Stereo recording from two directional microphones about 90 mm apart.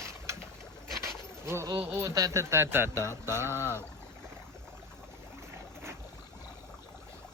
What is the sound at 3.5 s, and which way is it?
Speech, 25° left (ahead or behind).